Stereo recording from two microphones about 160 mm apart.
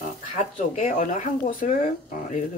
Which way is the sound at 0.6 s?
50° left (ahead or behind).